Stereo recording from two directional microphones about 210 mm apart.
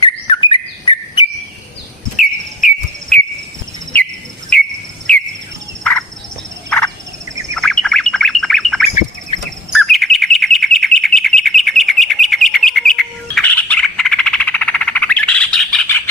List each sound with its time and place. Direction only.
0.0 s bird: 20° left (ahead or behind)
3.9 s cricket: 10° left (ahead or behind)
6.7 s turkey: 5° left (ahead or behind)
7.5 s bird: 5° left (ahead or behind)